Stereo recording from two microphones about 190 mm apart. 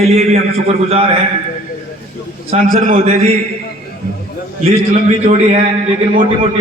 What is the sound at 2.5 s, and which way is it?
Speech, 40° right (ahead or behind).